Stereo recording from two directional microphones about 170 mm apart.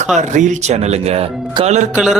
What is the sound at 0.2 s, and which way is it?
A man's voice, 45° right (ahead or behind).